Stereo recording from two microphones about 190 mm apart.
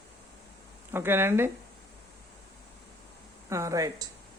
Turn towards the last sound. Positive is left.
turn(degrees=-15)  # may be behind; listen again after turning